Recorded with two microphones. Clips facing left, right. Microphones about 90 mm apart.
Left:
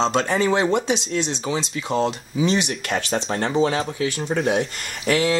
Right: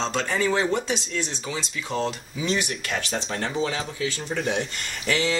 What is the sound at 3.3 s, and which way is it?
Speech, 40° left (ahead or behind).